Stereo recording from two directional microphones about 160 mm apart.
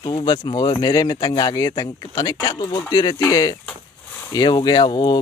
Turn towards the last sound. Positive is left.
turn(degrees=30)  # may be behind; listen again after turning